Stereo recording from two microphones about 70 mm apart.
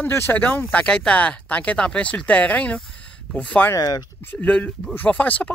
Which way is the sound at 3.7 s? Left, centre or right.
Left.